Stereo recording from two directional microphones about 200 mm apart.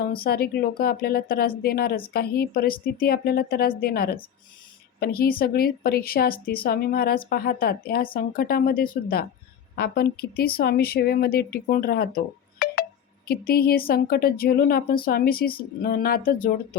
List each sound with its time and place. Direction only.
0.0 s speech: 50° left (ahead or behind)